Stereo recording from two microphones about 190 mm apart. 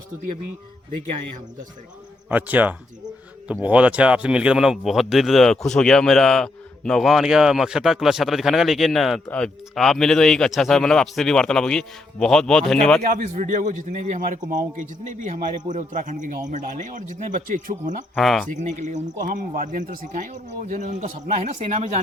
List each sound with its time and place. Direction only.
2.3 s speech: 10° right (ahead or behind)
13.0 s speech: 45° right (ahead or behind)
18.1 s speech: centre (ahead or behind)
18.8 s speech: 40° right (ahead or behind)